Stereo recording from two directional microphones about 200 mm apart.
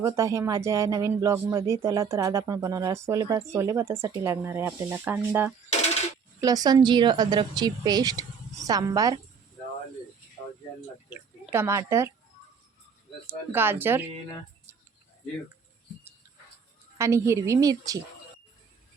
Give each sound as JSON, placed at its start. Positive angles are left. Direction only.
{"t": 0.0, "sound": "speech", "side_deg": -15}
{"t": 5.7, "sound": "a sound", "side_deg": 35}
{"t": 6.4, "sound": "a woman's voice", "side_deg": -20}
{"t": 11.1, "sound": "speech", "side_deg": -10}
{"t": 13.2, "sound": "speech", "side_deg": -10}
{"t": 17.0, "sound": "speech", "side_deg": -15}